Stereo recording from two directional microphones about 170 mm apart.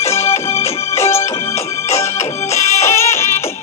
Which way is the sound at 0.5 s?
35° left (ahead or behind).